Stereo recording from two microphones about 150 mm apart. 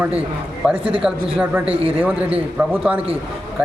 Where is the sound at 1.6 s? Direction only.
40° right (ahead or behind).